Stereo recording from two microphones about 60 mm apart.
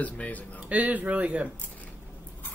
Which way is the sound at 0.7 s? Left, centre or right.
Right.